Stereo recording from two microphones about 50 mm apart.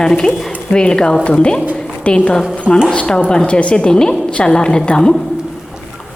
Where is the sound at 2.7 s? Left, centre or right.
Centre.